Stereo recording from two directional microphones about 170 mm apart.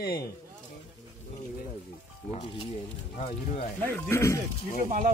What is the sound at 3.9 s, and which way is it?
Speech, 10° left (ahead or behind).